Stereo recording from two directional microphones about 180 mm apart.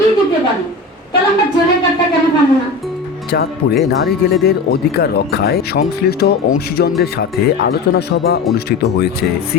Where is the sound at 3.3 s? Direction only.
65° left (ahead or behind).